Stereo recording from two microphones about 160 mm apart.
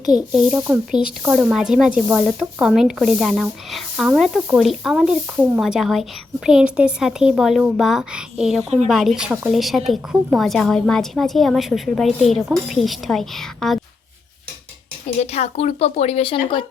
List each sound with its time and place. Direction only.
0.3 s speech: 5° right (ahead or behind)
15.0 s speech: 45° left (ahead or behind)